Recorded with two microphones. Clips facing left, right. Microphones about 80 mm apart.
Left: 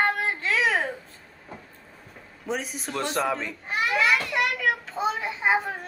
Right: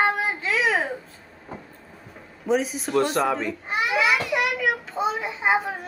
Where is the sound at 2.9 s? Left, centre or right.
Centre.